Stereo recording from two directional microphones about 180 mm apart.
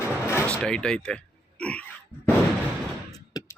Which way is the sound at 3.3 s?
20° left (ahead or behind).